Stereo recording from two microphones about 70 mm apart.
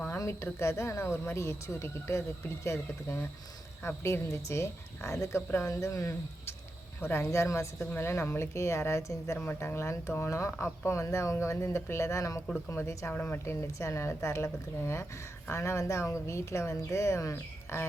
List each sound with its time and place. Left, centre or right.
0.6 s a woman's voice: left
7.0 s a woman's voice: left
7.3 s speech: left
7.8 s a woman's voice: left
12.6 s a woman's voice: left